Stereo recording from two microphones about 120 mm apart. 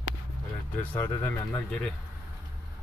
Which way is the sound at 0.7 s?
15° left (ahead or behind).